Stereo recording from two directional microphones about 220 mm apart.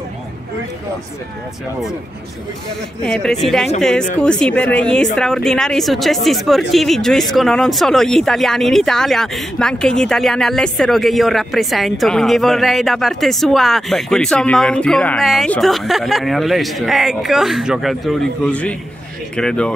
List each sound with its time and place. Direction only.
3.1 s speech: 5° left (ahead or behind)